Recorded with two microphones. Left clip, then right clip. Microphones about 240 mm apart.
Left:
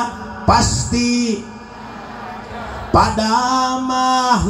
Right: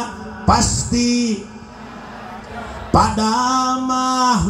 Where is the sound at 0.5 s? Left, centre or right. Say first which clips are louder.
Left 2 dB; right.